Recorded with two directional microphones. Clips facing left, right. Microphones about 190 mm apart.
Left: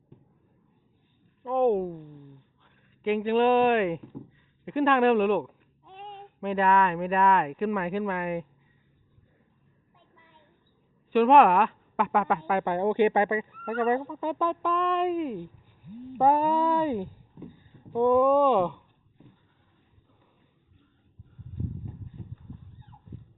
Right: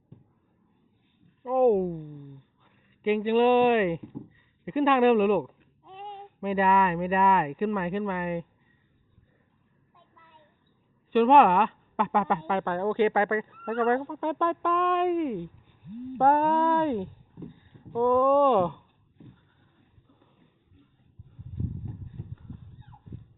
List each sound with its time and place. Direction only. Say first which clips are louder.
1.5 s speech: right 2 dB; centre (ahead or behind)
11.1 s speech: even; centre (ahead or behind)
12.6 s speech: left 2 dB; 15° left (ahead or behind)
13.8 s speech: right 1 dB; centre (ahead or behind)
17.9 s speech: left 1 dB; 15° left (ahead or behind)
18.3 s speech: even; centre (ahead or behind)
21.8 s a sound: right 1 dB; centre (ahead or behind)